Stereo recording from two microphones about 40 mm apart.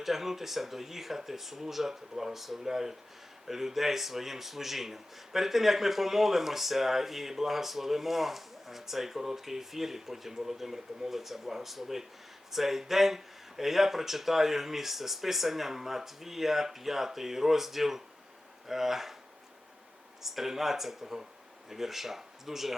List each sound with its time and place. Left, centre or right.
0.0 s speech: centre
20.2 s speech: centre